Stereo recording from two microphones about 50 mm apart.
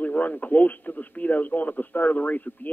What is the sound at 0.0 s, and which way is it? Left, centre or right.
Speech, left.